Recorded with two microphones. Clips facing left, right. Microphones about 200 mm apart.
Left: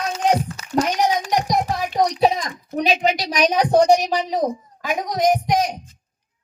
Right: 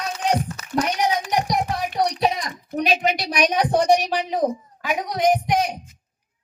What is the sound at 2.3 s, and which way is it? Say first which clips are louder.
Speech: left 2 dB; 35° left (ahead or behind).